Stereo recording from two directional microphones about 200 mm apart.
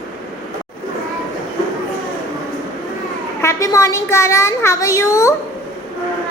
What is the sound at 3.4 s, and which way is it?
A child's voice, 15° left (ahead or behind).